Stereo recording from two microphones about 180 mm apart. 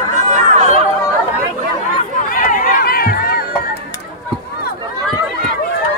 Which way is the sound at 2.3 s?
50° left (ahead or behind).